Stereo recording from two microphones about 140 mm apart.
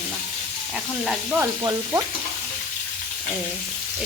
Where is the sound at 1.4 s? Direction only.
15° right (ahead or behind).